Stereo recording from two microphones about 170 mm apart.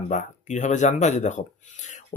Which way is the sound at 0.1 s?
45° left (ahead or behind).